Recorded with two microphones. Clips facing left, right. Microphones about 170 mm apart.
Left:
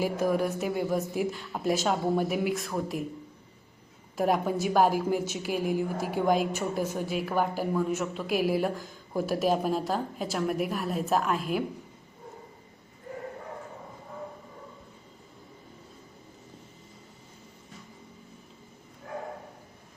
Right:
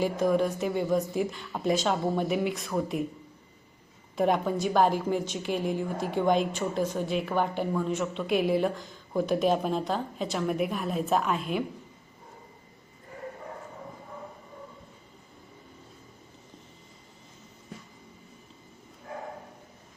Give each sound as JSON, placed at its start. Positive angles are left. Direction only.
{"t": 0.0, "sound": "a woman's voice", "side_deg": 5}
{"t": 4.2, "sound": "a woman's voice", "side_deg": 5}